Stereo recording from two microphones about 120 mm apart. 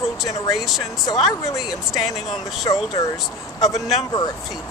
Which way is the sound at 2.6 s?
30° left (ahead or behind).